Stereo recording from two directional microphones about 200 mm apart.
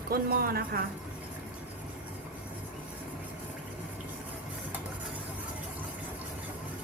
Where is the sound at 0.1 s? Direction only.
50° right (ahead or behind).